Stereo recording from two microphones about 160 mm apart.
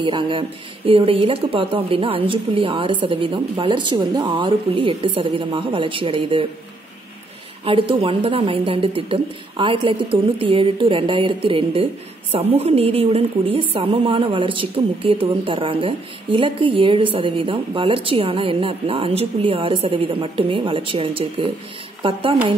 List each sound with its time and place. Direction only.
0.0 s a woman's voice: 30° right (ahead or behind)
7.6 s a woman's voice: 35° right (ahead or behind)